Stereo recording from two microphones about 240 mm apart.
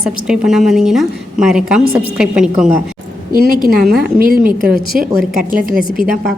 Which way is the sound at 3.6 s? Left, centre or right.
Right.